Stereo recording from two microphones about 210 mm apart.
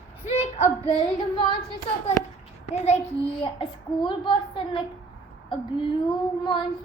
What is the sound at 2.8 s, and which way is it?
A child's voice, 30° left (ahead or behind).